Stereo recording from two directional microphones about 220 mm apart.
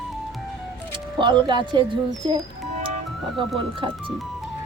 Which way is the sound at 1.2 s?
20° right (ahead or behind).